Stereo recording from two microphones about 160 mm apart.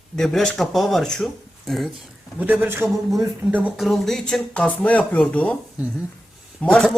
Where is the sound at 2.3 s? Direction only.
10° right (ahead or behind); by 5.6 s 10° left (ahead or behind).